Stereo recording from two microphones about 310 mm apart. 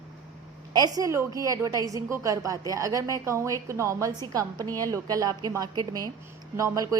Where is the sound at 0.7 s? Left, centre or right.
Centre.